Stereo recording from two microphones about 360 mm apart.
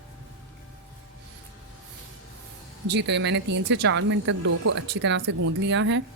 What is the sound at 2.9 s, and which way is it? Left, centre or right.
Speech, right.